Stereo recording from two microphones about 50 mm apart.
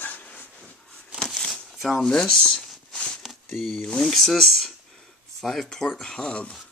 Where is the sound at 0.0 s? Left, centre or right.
Left.